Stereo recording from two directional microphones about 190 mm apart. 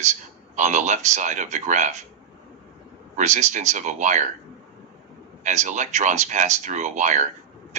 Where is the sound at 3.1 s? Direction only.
40° right (ahead or behind).